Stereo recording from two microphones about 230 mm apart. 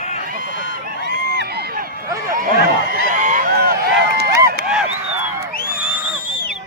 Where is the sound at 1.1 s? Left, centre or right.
Right.